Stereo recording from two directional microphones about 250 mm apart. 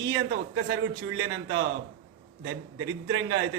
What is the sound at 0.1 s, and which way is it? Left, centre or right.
A man's voice, right.